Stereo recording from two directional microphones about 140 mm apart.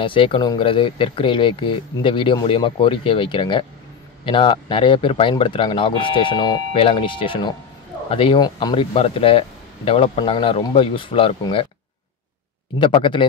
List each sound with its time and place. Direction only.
0.0 s speech: 40° left (ahead or behind)
12.7 s speech: 35° left (ahead or behind)